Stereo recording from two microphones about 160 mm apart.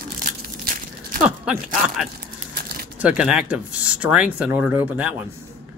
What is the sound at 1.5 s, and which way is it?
Speech, centre (ahead or behind).